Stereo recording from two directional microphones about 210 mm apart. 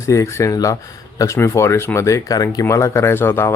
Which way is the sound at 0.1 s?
15° left (ahead or behind).